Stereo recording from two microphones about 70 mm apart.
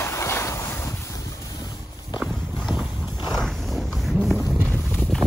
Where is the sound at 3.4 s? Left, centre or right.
Centre.